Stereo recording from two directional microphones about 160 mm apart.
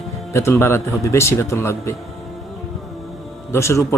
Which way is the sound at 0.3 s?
15° left (ahead or behind).